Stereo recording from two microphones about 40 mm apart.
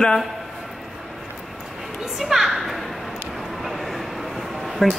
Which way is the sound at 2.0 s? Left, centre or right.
Centre.